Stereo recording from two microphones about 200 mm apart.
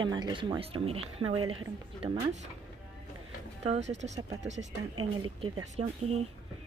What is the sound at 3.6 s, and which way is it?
Speech, 35° right (ahead or behind).